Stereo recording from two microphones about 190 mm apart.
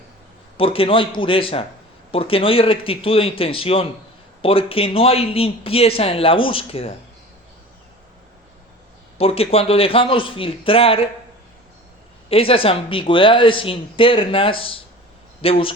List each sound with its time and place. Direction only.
0.5 s speech: 30° left (ahead or behind)
9.1 s speech: 30° left (ahead or behind)
12.3 s speech: 30° left (ahead or behind)